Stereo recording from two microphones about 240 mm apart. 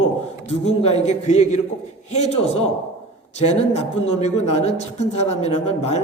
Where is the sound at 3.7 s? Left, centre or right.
Left.